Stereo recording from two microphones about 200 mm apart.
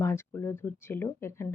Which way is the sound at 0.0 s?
15° left (ahead or behind).